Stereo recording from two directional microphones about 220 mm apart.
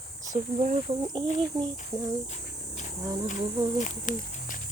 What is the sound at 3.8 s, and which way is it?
Speech, 35° left (ahead or behind).